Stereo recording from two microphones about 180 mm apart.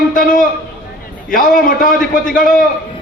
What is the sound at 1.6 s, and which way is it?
Speech, 50° left (ahead or behind).